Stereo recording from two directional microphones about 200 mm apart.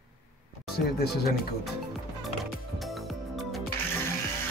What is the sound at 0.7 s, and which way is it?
Speech, 50° left (ahead or behind).